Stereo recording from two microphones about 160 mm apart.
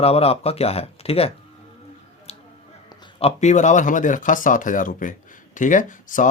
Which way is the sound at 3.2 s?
40° left (ahead or behind).